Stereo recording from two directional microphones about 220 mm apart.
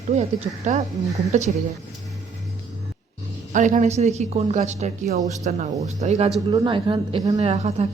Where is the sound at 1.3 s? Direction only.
30° right (ahead or behind).